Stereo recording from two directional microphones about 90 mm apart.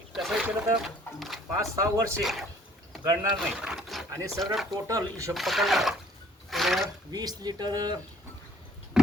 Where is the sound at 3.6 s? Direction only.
Centre (ahead or behind).